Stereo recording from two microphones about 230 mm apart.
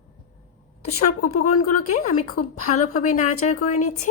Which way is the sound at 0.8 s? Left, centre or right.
Left.